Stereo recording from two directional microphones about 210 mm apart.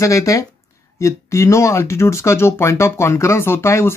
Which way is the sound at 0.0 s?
15° left (ahead or behind).